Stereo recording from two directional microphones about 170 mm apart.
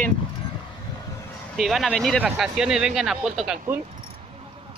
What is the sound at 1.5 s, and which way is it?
Speech, centre (ahead or behind).